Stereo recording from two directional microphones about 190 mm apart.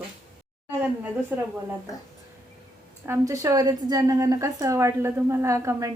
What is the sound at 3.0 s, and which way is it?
A woman's voice, 15° right (ahead or behind).